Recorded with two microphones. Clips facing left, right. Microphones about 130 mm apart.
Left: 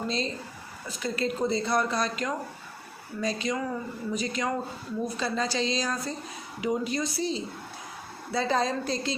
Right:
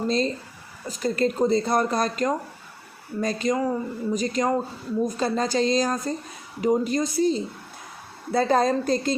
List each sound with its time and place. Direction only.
0.9 s speech: 45° right (ahead or behind)